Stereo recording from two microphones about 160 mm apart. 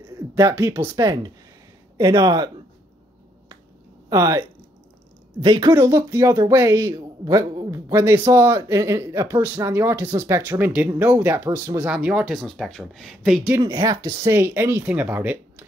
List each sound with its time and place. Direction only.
0.0 s speech: 20° right (ahead or behind)
4.1 s speech: 20° right (ahead or behind)
5.4 s a woman's voice: 35° right (ahead or behind)
5.7 s speech: 20° right (ahead or behind); by 13.6 s centre (ahead or behind)
13.6 s speech: 20° right (ahead or behind)